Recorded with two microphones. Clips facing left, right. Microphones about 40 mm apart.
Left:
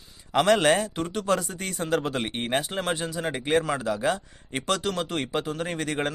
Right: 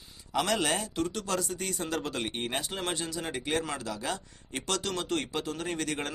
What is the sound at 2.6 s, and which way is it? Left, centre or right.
Speech, centre.